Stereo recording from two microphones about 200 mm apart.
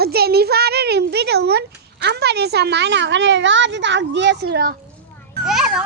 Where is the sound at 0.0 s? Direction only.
50° right (ahead or behind).